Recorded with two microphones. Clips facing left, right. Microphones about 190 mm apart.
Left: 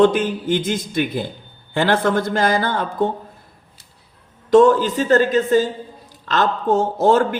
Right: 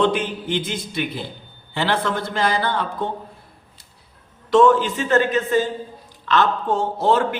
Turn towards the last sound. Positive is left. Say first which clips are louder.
# left 4 dB
turn(degrees=45)  # may be behind; listen again after turning